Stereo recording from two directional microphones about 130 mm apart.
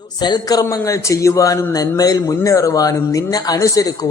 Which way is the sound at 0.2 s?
35° left (ahead or behind).